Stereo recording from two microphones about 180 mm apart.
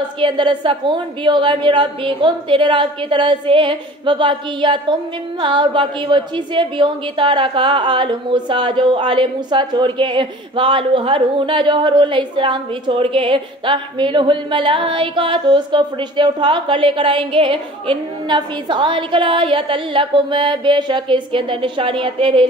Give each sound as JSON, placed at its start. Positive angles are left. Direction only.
{"t": 0.2, "sound": "a woman's voice", "side_deg": -25}